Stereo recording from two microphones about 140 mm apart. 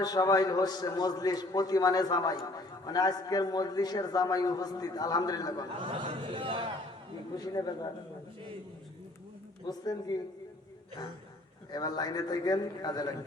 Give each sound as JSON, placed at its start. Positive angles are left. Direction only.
{"t": 0.0, "sound": "a man's voice", "side_deg": 25}
{"t": 5.8, "sound": "speech", "side_deg": -35}
{"t": 7.3, "sound": "a man's voice", "side_deg": 25}
{"t": 9.6, "sound": "a man's voice", "side_deg": 30}
{"t": 11.7, "sound": "a man's voice", "side_deg": 30}